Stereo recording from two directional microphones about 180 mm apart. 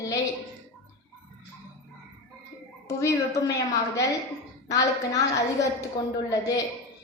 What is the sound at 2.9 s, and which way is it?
A woman's voice, 15° left (ahead or behind).